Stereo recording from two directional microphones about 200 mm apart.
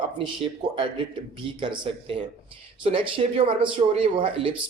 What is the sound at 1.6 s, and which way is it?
Speech, 25° right (ahead or behind).